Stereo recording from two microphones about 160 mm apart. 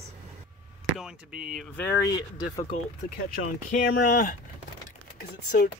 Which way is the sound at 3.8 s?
60° left (ahead or behind).